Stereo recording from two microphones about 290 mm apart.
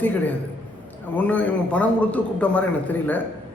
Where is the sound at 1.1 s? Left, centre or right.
Centre.